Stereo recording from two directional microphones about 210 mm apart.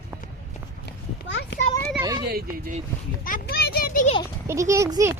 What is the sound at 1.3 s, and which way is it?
Speech, 55° left (ahead or behind).